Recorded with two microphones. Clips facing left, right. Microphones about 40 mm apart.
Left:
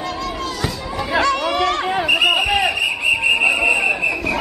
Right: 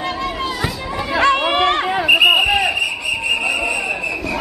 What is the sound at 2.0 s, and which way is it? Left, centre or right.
Basketball bounce, centre.